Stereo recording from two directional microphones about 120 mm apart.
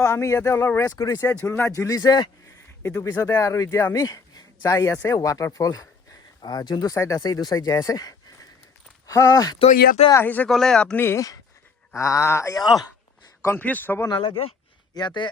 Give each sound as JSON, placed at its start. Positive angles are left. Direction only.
{"t": 0.0, "sound": "speech", "side_deg": 25}
{"t": 1.4, "sound": "speech", "side_deg": 15}
{"t": 1.7, "sound": "speech", "side_deg": 30}
{"t": 10.2, "sound": "speech", "side_deg": 15}
{"t": 10.5, "sound": "speech", "side_deg": 5}
{"t": 11.0, "sound": "speech", "side_deg": 25}
{"t": 14.1, "sound": "speech", "side_deg": 45}